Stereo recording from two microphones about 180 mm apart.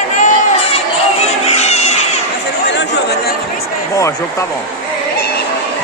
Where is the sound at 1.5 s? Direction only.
35° left (ahead or behind).